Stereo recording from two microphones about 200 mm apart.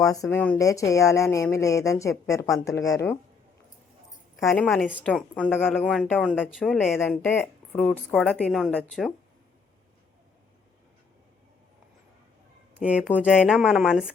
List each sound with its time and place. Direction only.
0.0 s a woman's voice: 15° left (ahead or behind)
4.4 s a woman's voice: 5° left (ahead or behind)
7.0 s a woman's voice: 10° left (ahead or behind)
12.8 s a woman's voice: 5° right (ahead or behind)